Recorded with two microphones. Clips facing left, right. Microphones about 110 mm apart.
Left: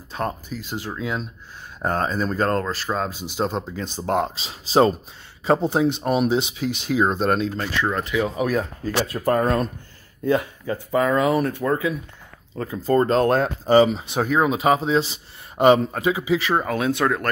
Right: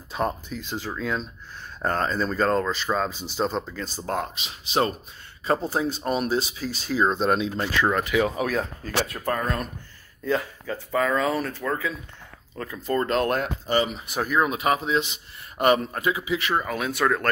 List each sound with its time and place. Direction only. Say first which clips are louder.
0.1 s speech: even; centre (ahead or behind)
7.2 s speech: left 2 dB; centre (ahead or behind)
7.5 s speech: right 1 dB; 20° right (ahead or behind)
8.4 s speech: left 3 dB; 5° left (ahead or behind)
9.1 s speech: left 7 dB; 35° left (ahead or behind)
10.2 s speech: left 5 dB; 15° left (ahead or behind)